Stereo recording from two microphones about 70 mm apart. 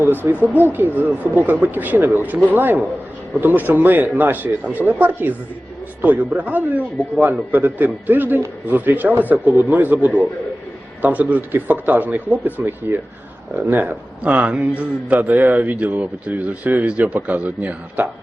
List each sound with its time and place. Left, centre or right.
0.0 s a man's voice: right